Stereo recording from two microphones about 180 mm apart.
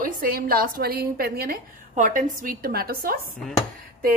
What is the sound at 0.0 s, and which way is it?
A woman's voice, 50° right (ahead or behind).